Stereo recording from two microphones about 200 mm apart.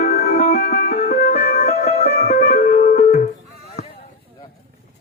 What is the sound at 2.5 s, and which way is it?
Music, 50° left (ahead or behind).